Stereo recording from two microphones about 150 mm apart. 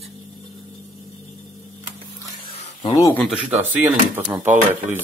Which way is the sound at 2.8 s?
25° left (ahead or behind).